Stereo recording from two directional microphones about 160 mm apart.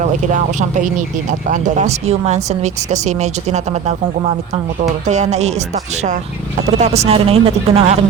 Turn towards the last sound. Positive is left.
turn(degrees=-40)  # may be behind; listen again after turning